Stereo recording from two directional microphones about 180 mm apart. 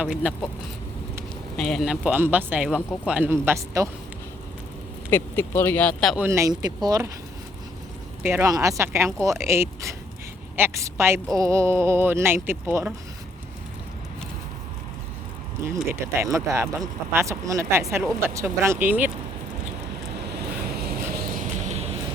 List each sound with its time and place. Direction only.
0.0 s speech: 5° right (ahead or behind)
1.5 s speech: 5° left (ahead or behind); by 3.8 s 15° right (ahead or behind)
5.1 s speech: 10° left (ahead or behind)
6.2 s speech: 15° right (ahead or behind)
8.2 s a woman's voice: 15° right (ahead or behind)
15.6 s speech: 15° right (ahead or behind)
20.4 s vehicle: 60° right (ahead or behind); by 21.8 s 40° right (ahead or behind)